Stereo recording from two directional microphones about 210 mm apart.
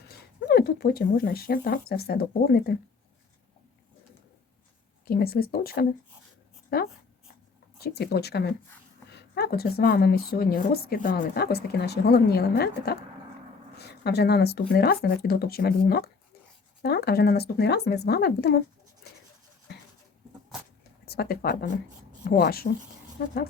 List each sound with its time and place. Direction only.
0.4 s a woman's voice: 45° left (ahead or behind)
5.0 s a woman's voice: 45° left (ahead or behind)
21.0 s a woman's voice: 50° left (ahead or behind)